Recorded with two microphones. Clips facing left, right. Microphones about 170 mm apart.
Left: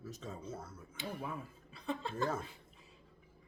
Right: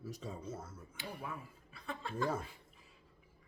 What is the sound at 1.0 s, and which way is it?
Speech, 20° left (ahead or behind).